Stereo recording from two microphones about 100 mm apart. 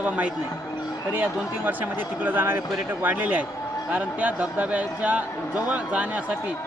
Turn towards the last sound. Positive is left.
turn(degrees=-15)  # may be behind; listen again after turning